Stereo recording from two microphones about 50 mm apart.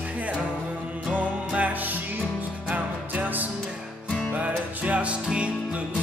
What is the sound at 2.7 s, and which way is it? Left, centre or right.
Music, right.